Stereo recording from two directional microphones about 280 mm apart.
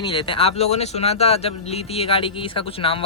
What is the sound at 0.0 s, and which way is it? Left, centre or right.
Speech, centre.